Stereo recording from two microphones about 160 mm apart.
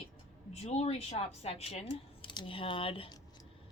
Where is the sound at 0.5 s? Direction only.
40° left (ahead or behind).